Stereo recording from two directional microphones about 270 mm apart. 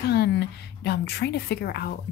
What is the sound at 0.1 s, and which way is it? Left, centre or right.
Speech, left.